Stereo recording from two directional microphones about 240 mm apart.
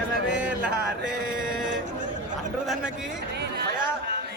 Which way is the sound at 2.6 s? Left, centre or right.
Centre.